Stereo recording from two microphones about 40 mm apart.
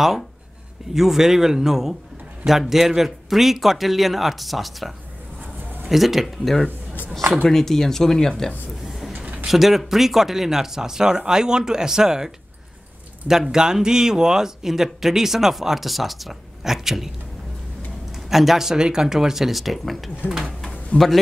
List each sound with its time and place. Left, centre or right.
0.9 s speech: centre
6.2 s speech: centre
9.1 s a sound: right
9.5 s speech: centre
13.3 s speech: centre
18.3 s speech: centre
20.9 s a man's voice: left